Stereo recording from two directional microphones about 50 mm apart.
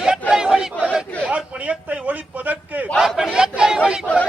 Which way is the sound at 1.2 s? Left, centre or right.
Right.